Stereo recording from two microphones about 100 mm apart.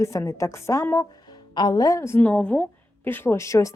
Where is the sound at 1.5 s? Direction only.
40° left (ahead or behind).